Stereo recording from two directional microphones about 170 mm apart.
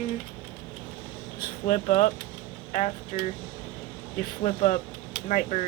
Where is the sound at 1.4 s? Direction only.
50° left (ahead or behind).